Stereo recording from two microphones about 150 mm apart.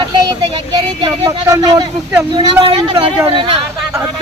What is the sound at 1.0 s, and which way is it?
Speech, 25° right (ahead or behind).